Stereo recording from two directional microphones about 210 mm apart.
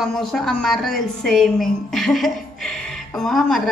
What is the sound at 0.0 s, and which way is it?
A woman's voice, centre (ahead or behind).